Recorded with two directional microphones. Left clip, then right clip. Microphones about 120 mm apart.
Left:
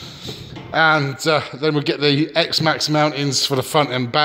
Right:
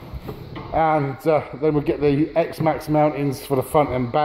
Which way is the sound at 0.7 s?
25° left (ahead or behind).